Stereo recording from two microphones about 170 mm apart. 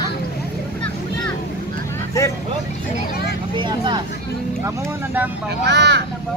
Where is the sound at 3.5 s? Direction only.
25° right (ahead or behind).